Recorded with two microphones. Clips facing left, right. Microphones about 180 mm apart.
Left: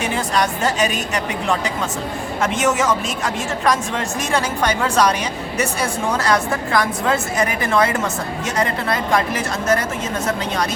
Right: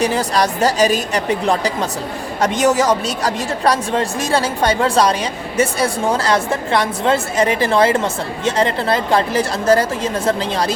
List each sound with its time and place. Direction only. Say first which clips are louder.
0.0 s a woman's voice: right 4 dB; 35° right (ahead or behind)